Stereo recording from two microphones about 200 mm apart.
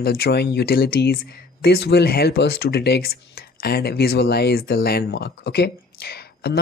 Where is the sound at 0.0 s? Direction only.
50° left (ahead or behind).